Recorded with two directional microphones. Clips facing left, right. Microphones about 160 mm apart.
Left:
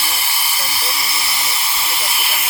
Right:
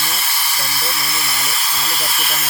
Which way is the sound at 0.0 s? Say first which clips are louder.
Even; 10° left (ahead or behind).